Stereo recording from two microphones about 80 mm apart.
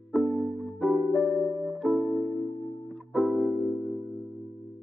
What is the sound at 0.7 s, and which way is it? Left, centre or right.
Music, centre.